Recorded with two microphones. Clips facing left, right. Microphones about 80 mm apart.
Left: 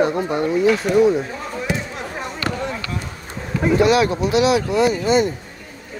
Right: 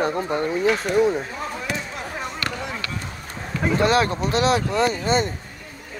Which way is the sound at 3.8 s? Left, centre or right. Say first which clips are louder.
Left 3 dB; right.